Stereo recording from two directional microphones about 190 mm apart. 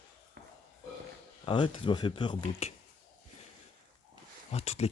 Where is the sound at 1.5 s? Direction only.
25° left (ahead or behind).